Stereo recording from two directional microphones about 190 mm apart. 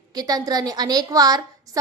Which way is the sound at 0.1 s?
20° right (ahead or behind).